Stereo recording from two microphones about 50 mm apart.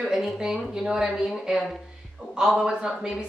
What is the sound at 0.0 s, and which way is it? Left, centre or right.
A woman's voice, centre.